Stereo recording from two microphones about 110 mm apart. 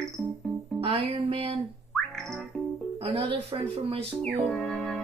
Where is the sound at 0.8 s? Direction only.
60° right (ahead or behind).